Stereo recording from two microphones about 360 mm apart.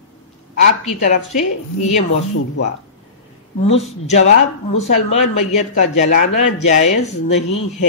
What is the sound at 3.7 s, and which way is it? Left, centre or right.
Speech, centre.